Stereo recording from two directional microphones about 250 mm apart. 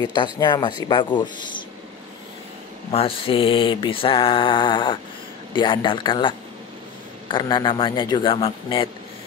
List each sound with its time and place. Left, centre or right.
0.0 s speech: centre
2.9 s mantra: left